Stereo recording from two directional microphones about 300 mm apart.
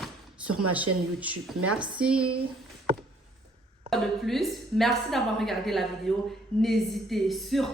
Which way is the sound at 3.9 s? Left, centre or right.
Centre.